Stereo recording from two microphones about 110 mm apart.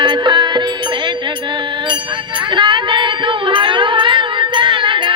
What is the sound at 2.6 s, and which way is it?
Music, 45° right (ahead or behind).